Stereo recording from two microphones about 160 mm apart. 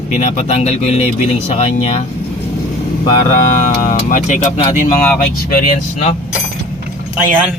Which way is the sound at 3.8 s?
55° left (ahead or behind).